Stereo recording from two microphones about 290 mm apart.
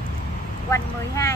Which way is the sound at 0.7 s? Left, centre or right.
Centre.